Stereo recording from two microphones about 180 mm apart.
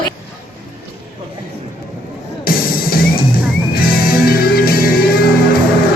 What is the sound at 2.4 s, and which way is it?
Music, 55° left (ahead or behind).